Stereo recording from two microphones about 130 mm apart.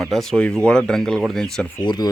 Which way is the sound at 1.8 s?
30° left (ahead or behind).